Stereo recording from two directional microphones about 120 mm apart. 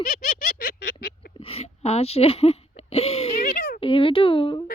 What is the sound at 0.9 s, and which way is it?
A child's voice, 50° left (ahead or behind).